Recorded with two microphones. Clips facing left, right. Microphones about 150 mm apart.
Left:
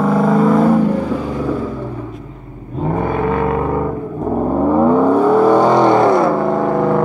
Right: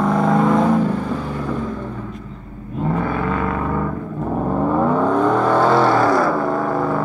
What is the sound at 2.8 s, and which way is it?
Vehicle, 20° left (ahead or behind).